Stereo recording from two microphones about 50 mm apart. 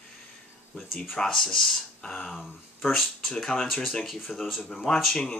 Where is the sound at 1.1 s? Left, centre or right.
Centre.